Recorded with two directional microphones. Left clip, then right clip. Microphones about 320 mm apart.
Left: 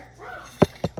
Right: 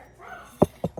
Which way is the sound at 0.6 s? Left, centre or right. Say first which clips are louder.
Left 1 dB; right.